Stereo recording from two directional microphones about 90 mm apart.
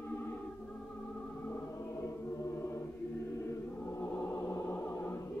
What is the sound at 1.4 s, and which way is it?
Music, 30° left (ahead or behind).